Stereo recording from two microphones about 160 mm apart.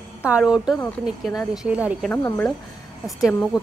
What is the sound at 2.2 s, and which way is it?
Speech, 10° left (ahead or behind).